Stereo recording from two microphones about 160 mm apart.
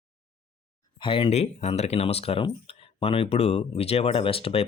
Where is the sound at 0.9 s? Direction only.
30° left (ahead or behind).